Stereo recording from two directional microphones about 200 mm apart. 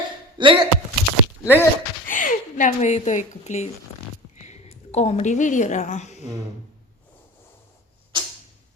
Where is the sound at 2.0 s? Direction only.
40° left (ahead or behind).